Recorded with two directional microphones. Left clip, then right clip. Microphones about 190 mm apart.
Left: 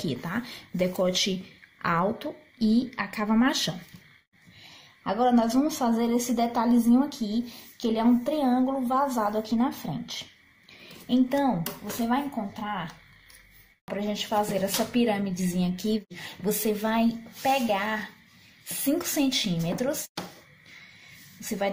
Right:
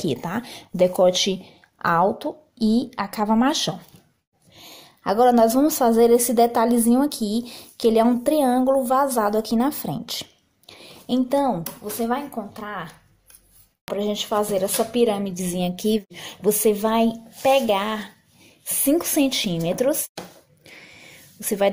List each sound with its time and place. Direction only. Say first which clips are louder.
0.0 s speech: right 6 dB; 30° right (ahead or behind)
4.6 s a woman's voice: right 6 dB; 45° right (ahead or behind)
10.7 s a sound: right 3 dB; 40° right (ahead or behind)
12.1 s a woman's voice: right 2 dB; 45° right (ahead or behind)
13.9 s speech: right 4 dB; 35° right (ahead or behind)
21.4 s speech: right 8 dB; 45° right (ahead or behind)